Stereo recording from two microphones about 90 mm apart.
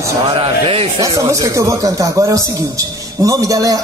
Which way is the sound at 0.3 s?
90° right.